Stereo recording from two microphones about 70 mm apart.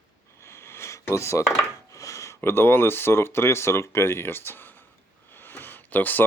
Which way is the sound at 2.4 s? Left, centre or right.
Left.